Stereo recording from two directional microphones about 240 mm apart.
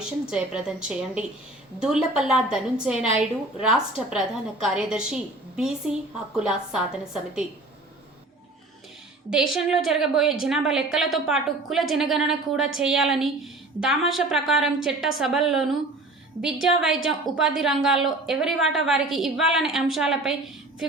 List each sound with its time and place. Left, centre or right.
0.3 s a woman's voice: centre
9.3 s a woman's voice: centre